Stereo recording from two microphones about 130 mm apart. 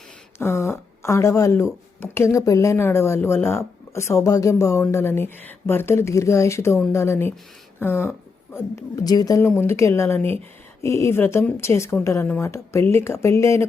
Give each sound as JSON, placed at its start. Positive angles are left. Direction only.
{"t": 0.3, "sound": "speech", "side_deg": 20}